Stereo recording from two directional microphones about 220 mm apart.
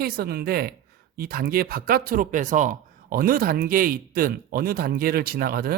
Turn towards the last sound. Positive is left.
turn(degrees=-45)  # may be behind; listen again after turning